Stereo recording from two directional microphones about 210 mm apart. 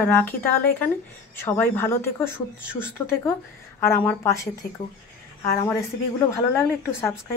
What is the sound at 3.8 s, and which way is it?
Speech, 10° left (ahead or behind).